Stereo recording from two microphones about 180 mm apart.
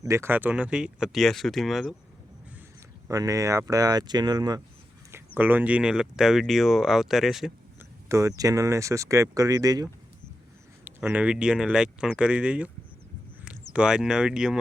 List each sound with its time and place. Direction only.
0.0 s speech: 15° right (ahead or behind)
3.1 s speech: 20° right (ahead or behind)
5.1 s speech: 10° right (ahead or behind)
8.1 s speech: 20° right (ahead or behind)
10.8 s speech: 10° right (ahead or behind)